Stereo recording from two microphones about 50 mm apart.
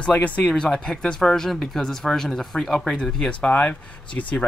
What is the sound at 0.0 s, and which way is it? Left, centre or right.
Speech, left.